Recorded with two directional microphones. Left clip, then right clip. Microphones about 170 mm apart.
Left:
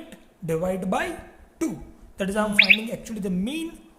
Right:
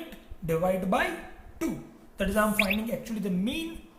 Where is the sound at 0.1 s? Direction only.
70° left (ahead or behind).